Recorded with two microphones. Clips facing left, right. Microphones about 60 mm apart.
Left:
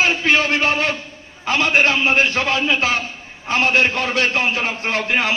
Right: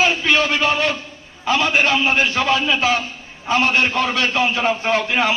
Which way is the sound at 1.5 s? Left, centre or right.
Left.